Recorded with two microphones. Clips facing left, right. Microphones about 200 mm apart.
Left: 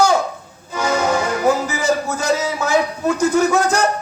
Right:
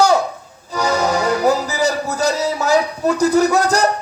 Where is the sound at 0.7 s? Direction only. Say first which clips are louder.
Even; 40° right (ahead or behind).